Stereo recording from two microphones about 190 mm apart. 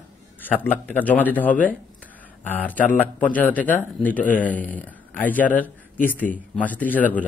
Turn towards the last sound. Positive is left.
turn(degrees=10)  # may be behind; listen again after turning